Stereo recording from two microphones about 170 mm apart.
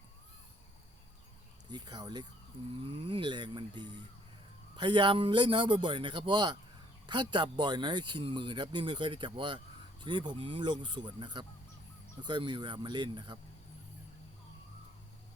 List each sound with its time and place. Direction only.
1.7 s speech: 25° right (ahead or behind)